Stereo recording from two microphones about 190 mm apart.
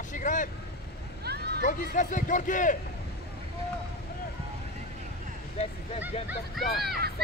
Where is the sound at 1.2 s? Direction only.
60° right (ahead or behind).